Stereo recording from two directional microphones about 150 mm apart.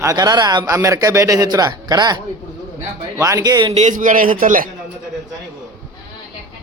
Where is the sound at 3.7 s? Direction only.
55° right (ahead or behind).